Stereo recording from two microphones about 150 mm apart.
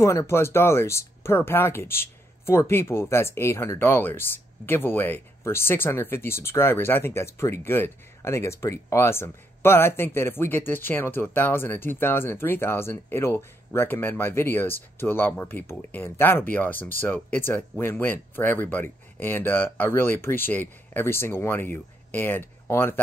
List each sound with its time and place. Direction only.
0.0 s speech: 20° left (ahead or behind)